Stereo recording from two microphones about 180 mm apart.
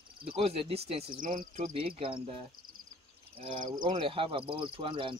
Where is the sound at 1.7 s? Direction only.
30° right (ahead or behind).